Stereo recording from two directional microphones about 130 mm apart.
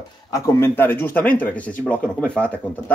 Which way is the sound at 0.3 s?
20° left (ahead or behind).